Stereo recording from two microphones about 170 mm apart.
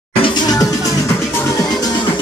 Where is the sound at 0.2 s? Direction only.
25° left (ahead or behind).